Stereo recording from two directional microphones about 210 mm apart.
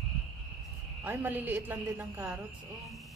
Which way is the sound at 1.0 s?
10° right (ahead or behind).